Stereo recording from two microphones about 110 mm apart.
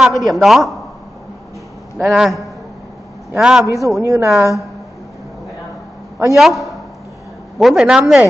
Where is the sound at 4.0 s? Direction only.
25° right (ahead or behind).